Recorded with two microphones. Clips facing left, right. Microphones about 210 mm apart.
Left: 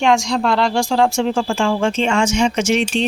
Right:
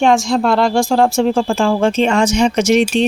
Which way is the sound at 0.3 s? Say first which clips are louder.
Right 3 dB; 45° right (ahead or behind).